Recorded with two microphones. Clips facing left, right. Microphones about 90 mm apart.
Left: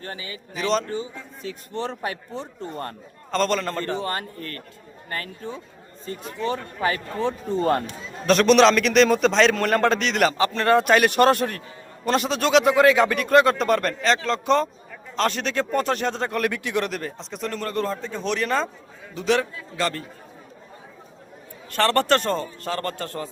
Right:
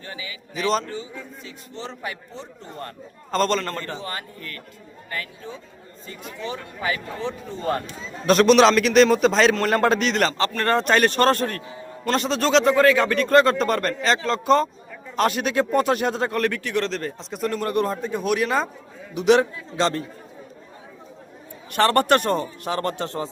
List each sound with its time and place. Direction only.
0.0 s a man's voice: 45° left (ahead or behind)
0.5 s a man's voice: centre (ahead or behind)
0.9 s speech: 35° left (ahead or behind)
1.5 s a man's voice: 50° left (ahead or behind)
3.3 s a man's voice: centre (ahead or behind)
4.0 s a man's voice: 40° left (ahead or behind)
8.3 s a man's voice: centre (ahead or behind)
16.4 s speech: 15° left (ahead or behind)
17.0 s a man's voice: centre (ahead or behind); by 20.1 s 20° right (ahead or behind)
21.7 s a man's voice: 15° right (ahead or behind)